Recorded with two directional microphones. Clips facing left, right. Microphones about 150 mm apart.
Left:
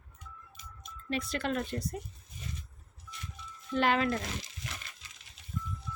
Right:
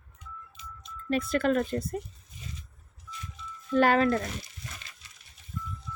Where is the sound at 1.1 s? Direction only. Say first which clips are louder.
Right 7 dB; 50° right (ahead or behind).